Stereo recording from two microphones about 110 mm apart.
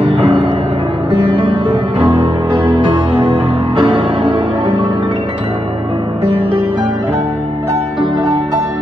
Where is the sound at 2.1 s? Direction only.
55° right (ahead or behind).